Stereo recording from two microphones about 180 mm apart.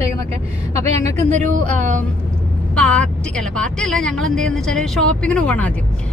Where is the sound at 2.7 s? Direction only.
5° left (ahead or behind).